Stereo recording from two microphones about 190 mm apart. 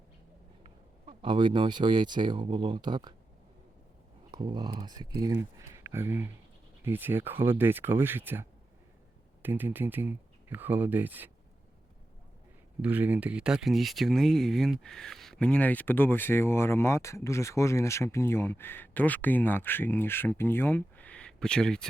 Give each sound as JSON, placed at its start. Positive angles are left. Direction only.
{"t": 0.6, "sound": "speech", "side_deg": -25}
{"t": 4.3, "sound": "speech", "side_deg": -25}
{"t": 12.8, "sound": "speech", "side_deg": -10}